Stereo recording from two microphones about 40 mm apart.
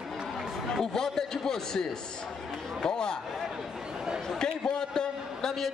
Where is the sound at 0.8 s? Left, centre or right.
Centre.